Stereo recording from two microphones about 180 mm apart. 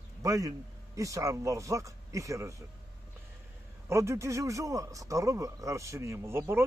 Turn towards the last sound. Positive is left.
turn(degrees=-15)  # may be behind; listen again after turning